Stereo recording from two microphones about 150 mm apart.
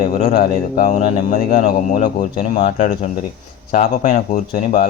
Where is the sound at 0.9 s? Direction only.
60° left (ahead or behind).